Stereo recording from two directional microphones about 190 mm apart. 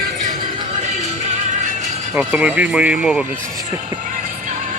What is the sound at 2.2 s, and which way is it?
Speech, 10° right (ahead or behind).